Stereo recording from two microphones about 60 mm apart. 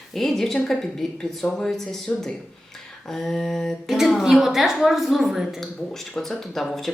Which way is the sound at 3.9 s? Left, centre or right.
Centre.